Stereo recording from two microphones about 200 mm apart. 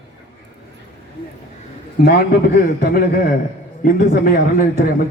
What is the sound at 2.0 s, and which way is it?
A man's voice, 50° left (ahead or behind).